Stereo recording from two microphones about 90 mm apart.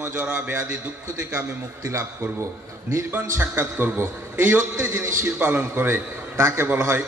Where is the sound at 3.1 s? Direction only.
25° right (ahead or behind).